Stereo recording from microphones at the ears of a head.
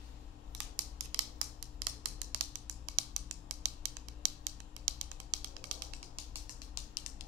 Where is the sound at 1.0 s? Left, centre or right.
Right.